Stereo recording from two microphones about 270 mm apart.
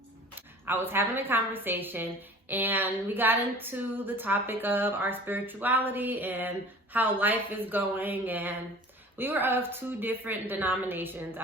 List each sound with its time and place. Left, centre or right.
0.6 s speech: centre